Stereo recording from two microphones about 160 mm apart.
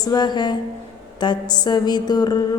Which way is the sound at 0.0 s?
25° left (ahead or behind).